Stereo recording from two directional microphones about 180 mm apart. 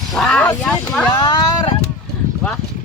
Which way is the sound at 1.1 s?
25° left (ahead or behind).